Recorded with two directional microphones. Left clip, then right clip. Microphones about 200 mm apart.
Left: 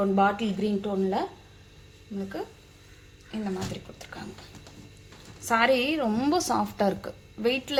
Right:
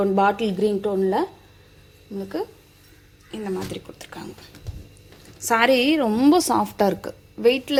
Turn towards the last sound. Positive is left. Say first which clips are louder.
# right 8 dB
turn(degrees=-25)  # may be behind; listen again after turning